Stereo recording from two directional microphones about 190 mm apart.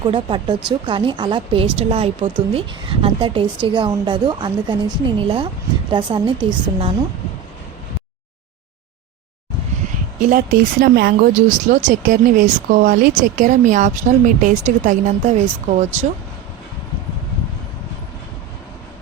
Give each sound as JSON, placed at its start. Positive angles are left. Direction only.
{"t": 0.0, "sound": "speech", "side_deg": -25}
{"t": 10.2, "sound": "speech", "side_deg": -45}